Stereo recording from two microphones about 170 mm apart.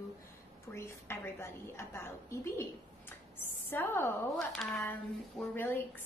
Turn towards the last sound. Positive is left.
turn(degrees=10)  # may be behind; listen again after turning